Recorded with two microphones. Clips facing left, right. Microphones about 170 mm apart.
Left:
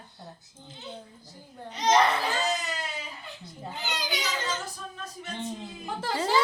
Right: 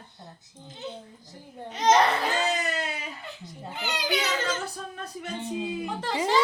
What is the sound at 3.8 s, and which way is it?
Children playing, 60° right (ahead or behind).